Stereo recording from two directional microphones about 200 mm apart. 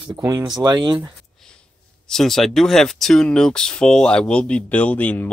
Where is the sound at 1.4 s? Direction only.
5° left (ahead or behind).